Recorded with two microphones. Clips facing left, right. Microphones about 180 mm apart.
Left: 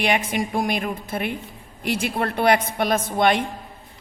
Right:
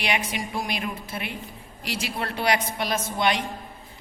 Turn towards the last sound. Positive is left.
turn(degrees=50)  # may be behind; listen again after turning